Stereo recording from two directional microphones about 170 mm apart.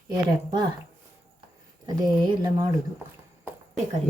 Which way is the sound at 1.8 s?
25° right (ahead or behind).